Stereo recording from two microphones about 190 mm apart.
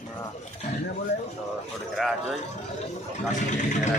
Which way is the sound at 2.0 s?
Centre (ahead or behind).